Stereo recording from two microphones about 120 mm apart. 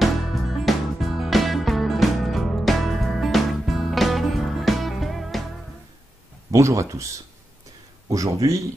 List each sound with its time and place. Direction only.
0.0 s music: centre (ahead or behind)
6.5 s speech: 25° right (ahead or behind)